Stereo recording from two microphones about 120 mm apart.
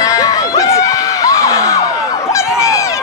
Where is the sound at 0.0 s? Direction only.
30° left (ahead or behind).